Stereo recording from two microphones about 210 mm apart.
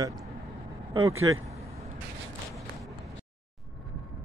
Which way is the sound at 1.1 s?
75° right (ahead or behind).